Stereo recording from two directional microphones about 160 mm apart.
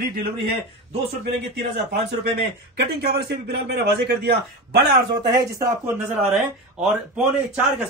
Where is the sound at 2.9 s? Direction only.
85° right.